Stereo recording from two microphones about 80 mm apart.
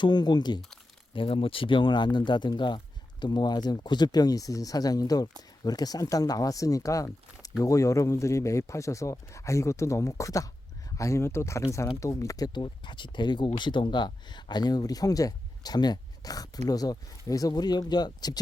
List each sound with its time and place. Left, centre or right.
0.0 s speech: left
1.1 s speech: left
12.5 s speech: left